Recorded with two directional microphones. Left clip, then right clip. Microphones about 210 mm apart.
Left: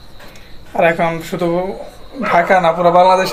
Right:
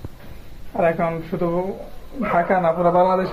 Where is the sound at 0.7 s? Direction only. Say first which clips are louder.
Left 6 dB; 20° left (ahead or behind).